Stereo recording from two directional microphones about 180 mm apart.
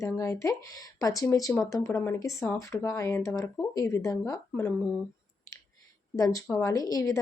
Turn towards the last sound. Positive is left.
turn(degrees=20)  # may be behind; listen again after turning